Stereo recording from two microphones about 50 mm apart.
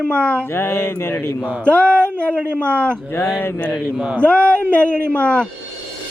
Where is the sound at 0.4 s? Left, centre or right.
Left.